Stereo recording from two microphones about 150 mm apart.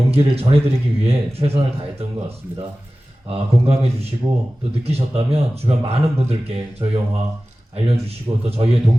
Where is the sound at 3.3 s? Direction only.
40° right (ahead or behind).